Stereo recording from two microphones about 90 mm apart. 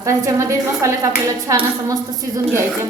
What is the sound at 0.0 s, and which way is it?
Speech, 35° right (ahead or behind).